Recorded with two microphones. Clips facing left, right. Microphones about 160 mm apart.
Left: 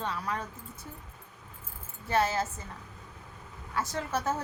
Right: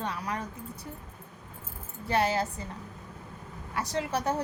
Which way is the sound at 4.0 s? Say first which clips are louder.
Right 4 dB; 15° right (ahead or behind).